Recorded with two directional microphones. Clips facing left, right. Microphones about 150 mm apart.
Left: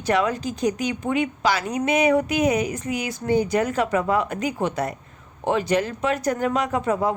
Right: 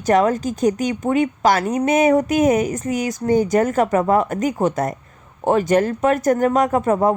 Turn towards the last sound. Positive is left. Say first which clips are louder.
# right 6 dB
turn(degrees=-45)  # may be behind; listen again after turning